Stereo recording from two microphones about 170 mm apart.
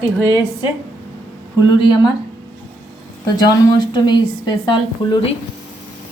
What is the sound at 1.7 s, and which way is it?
Speech, 25° left (ahead or behind).